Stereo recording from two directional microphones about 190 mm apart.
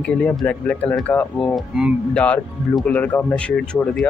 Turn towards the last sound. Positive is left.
turn(degrees=5)  # may be behind; listen again after turning